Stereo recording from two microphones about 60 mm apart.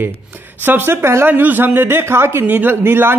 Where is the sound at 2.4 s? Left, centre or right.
Right.